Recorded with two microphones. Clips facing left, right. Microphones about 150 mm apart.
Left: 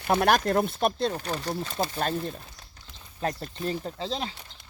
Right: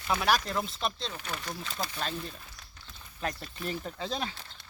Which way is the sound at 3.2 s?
30° left (ahead or behind).